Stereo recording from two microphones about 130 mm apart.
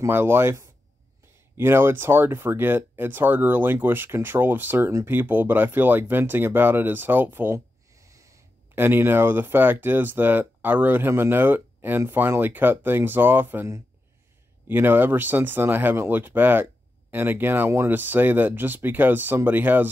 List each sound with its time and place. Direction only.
0.0 s speech: 15° right (ahead or behind)